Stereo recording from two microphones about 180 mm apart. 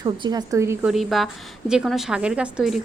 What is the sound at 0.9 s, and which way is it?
A woman's voice, centre (ahead or behind).